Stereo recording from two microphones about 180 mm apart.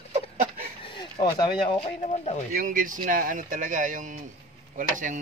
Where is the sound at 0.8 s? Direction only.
25° left (ahead or behind).